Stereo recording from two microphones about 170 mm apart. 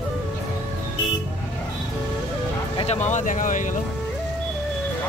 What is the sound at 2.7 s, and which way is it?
Speech, 40° left (ahead or behind).